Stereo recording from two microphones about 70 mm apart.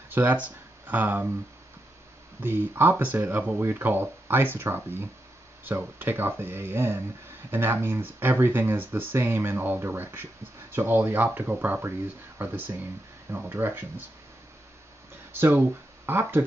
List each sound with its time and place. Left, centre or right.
0.1 s speech: right
2.4 s speech: right
15.3 s speech: right